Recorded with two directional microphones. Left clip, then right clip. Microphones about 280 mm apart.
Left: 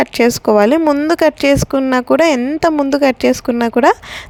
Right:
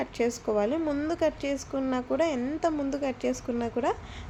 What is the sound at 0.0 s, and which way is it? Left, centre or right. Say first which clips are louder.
A woman's voice: left 16 dB; left.